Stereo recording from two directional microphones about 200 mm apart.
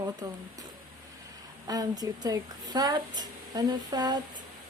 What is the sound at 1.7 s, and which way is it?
A woman's voice, 20° right (ahead or behind).